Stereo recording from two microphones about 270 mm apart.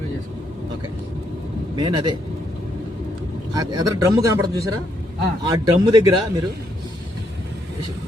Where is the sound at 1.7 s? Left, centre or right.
Centre.